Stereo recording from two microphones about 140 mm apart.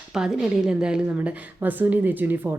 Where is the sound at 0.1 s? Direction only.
5° right (ahead or behind).